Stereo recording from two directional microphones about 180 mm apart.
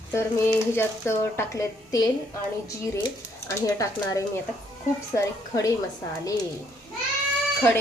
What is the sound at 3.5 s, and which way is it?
Speech, 20° left (ahead or behind).